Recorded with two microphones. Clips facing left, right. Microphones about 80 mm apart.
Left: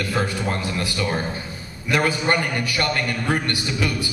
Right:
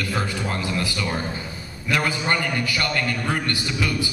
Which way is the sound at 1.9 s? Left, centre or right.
Left.